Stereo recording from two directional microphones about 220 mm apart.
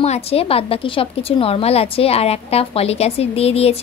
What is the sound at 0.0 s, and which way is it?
A woman's voice, 30° left (ahead or behind).